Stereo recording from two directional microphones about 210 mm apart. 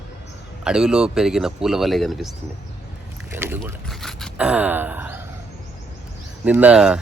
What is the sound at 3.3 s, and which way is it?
Speech, 10° right (ahead or behind).